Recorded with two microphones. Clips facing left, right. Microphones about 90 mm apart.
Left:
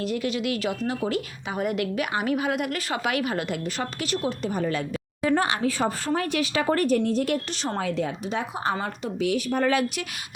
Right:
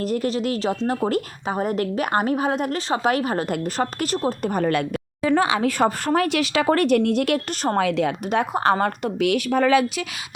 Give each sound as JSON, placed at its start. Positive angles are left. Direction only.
{"t": 0.0, "sound": "a woman's voice", "side_deg": -40}
{"t": 0.9, "sound": "a woman's voice", "side_deg": -45}
{"t": 4.4, "sound": "a woman's voice", "side_deg": -60}